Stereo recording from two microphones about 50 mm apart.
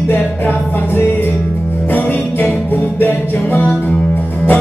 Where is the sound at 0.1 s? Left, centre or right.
Left.